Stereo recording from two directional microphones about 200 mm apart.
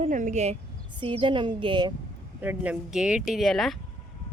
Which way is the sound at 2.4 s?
10° right (ahead or behind).